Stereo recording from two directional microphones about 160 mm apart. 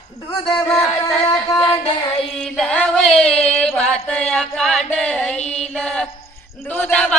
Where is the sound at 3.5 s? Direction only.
5° left (ahead or behind).